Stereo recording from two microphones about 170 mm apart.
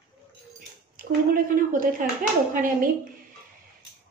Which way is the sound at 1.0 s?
55° right (ahead or behind).